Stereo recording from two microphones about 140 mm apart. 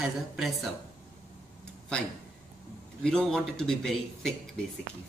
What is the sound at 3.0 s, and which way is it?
A woman's voice, 5° left (ahead or behind).